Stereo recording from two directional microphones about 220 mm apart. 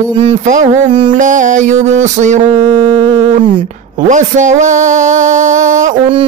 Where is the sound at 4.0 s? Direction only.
35° right (ahead or behind).